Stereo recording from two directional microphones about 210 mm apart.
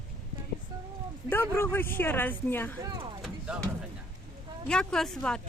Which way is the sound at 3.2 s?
5° right (ahead or behind).